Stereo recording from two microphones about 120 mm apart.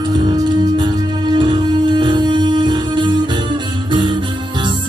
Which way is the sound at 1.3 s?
40° right (ahead or behind).